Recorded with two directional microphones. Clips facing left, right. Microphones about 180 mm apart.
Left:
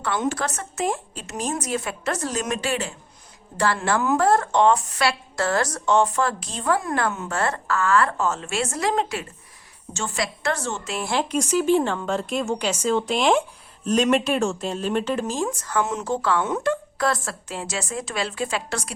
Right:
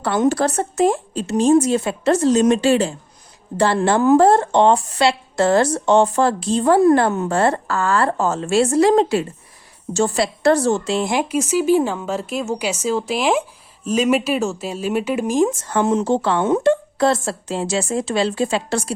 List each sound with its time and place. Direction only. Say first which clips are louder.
0.0 s speech: right 8 dB; 35° right (ahead or behind)
11.1 s speech: left 1 dB; 10° right (ahead or behind); by 18.9 s 30° right (ahead or behind)